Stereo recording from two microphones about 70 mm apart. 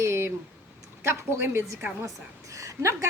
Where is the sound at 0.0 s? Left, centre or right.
Right.